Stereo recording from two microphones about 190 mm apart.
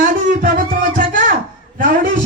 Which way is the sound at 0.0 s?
45° right (ahead or behind).